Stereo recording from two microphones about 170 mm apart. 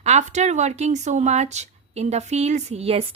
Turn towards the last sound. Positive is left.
turn(degrees=-35)  # may be behind; listen again after turning